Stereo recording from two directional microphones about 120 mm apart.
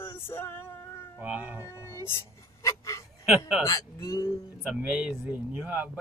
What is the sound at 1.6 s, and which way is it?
Music, 25° left (ahead or behind).